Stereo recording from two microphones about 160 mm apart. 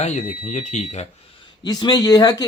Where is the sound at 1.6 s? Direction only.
25° left (ahead or behind).